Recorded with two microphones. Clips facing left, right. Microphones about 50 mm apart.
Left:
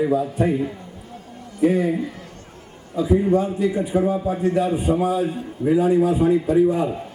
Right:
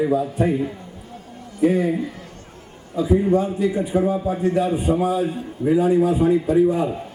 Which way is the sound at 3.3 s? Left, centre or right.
Left.